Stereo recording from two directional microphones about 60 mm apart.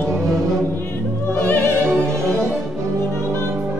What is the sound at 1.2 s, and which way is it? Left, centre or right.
Music, left.